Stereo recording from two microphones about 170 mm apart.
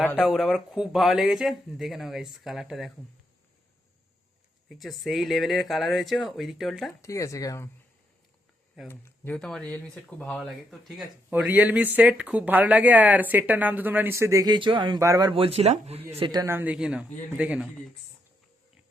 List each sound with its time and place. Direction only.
0.3 s speech: centre (ahead or behind)
4.7 s speech: centre (ahead or behind)
7.0 s speech: 20° left (ahead or behind)
8.9 s speech: 10° left (ahead or behind); by 16.0 s 40° right (ahead or behind)
16.1 s speech: 25° right (ahead or behind); by 17.7 s 10° right (ahead or behind)